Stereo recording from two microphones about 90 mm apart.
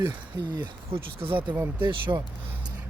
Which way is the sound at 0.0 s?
55° right (ahead or behind).